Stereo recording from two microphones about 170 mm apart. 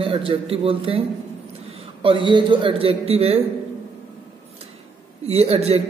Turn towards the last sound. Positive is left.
turn(degrees=-35)  # may be behind; listen again after turning